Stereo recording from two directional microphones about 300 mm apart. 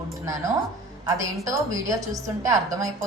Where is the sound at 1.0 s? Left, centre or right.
Centre.